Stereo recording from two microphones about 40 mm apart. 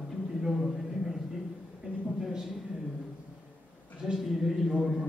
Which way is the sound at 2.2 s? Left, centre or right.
Centre.